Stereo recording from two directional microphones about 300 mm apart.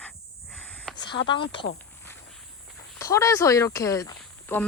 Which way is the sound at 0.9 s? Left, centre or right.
Centre.